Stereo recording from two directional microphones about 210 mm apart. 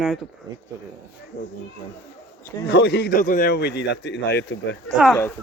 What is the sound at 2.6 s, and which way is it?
A man's voice, 55° left (ahead or behind).